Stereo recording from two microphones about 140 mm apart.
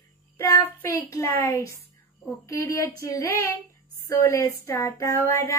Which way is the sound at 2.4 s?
25° left (ahead or behind).